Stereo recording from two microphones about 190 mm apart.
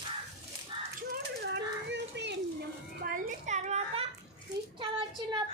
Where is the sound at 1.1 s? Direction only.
60° right (ahead or behind); by 4.0 s 35° right (ahead or behind).